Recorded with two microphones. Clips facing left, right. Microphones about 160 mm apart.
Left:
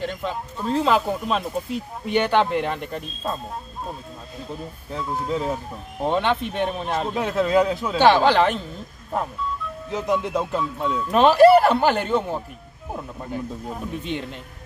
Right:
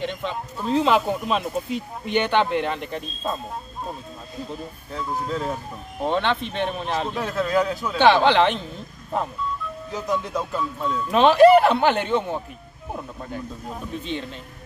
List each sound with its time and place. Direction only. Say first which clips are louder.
0.0 s speech: even; 5° left (ahead or behind)
5.2 s speech: left 2 dB; 10° left (ahead or behind)
9.8 s speech: left 3 dB; 25° left (ahead or behind)
10.1 s music: left 3 dB; 20° left (ahead or behind)
10.9 s speech: even; 5° left (ahead or behind)